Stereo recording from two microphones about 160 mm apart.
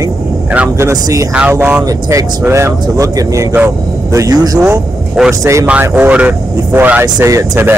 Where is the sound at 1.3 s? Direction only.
10° right (ahead or behind).